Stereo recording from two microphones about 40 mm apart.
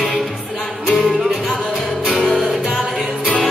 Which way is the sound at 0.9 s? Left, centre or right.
Centre.